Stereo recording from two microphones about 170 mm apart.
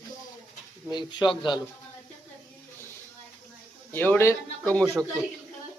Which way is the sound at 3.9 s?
10° left (ahead or behind).